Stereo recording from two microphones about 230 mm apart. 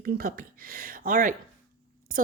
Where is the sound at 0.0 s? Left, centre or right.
Right.